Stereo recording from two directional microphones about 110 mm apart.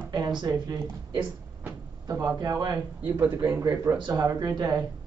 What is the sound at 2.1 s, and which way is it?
Speech, 35° right (ahead or behind).